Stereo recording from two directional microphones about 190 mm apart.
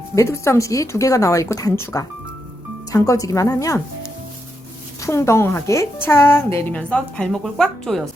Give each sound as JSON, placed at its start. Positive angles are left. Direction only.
{"t": 0.2, "sound": "a woman's voice", "side_deg": 15}
{"t": 4.9, "sound": "a woman's voice", "side_deg": 15}